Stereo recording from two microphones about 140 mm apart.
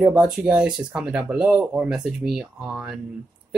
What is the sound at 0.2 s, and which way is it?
Speech, 5° right (ahead or behind).